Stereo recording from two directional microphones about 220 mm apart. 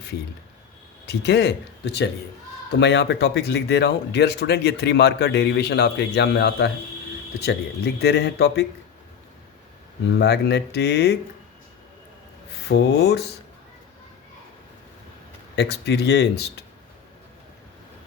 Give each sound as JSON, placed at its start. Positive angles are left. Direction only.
{"t": 1.0, "sound": "speech", "side_deg": 50}
{"t": 10.2, "sound": "speech", "side_deg": 50}
{"t": 12.6, "sound": "speech", "side_deg": 50}
{"t": 15.5, "sound": "speech", "side_deg": 50}